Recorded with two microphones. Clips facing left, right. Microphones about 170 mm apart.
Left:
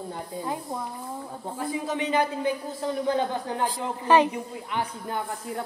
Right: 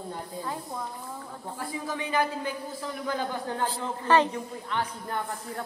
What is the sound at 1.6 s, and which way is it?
A man's voice, 20° left (ahead or behind).